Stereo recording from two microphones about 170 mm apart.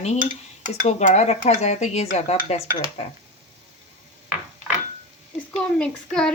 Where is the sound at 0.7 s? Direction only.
40° left (ahead or behind).